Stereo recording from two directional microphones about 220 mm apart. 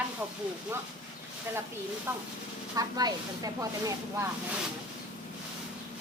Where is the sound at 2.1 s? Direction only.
10° right (ahead or behind).